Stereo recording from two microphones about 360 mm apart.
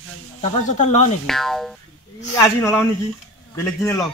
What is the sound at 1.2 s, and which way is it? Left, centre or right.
Speech, centre.